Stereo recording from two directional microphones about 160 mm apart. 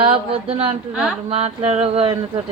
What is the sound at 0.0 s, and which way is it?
Speech, 35° right (ahead or behind).